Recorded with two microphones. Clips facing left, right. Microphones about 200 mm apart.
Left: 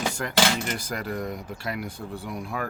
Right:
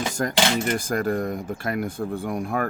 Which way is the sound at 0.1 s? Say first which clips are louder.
Right 2 dB; 45° right (ahead or behind).